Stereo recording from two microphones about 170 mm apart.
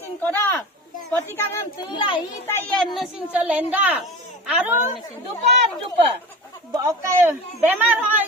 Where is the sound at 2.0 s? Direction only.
30° left (ahead or behind).